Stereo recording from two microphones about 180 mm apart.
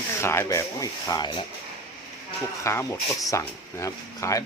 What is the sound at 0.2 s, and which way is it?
Speech, 15° left (ahead or behind).